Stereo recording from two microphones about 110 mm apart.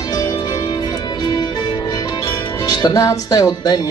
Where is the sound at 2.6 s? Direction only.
35° left (ahead or behind).